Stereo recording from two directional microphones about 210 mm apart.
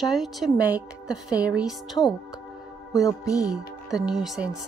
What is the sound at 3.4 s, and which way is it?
Speech, 5° right (ahead or behind).